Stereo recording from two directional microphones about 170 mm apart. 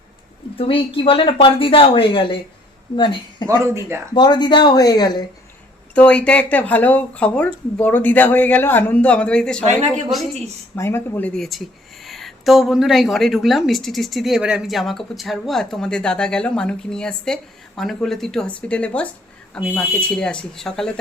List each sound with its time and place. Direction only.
0.5 s a woman's voice: 35° left (ahead or behind)
5.9 s a woman's voice: 5° left (ahead or behind)
10.8 s speech: 15° left (ahead or behind)
11.3 s a woman's voice: centre (ahead or behind)